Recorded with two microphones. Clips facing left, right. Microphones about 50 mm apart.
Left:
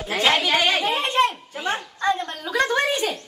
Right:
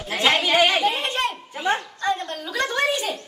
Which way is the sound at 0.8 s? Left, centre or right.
Centre.